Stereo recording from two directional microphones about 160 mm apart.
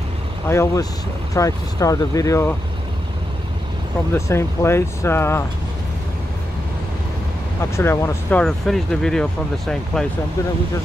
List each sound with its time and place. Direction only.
0.5 s speech: 15° left (ahead or behind)
4.1 s speech: 15° left (ahead or behind)
7.7 s speech: 15° left (ahead or behind)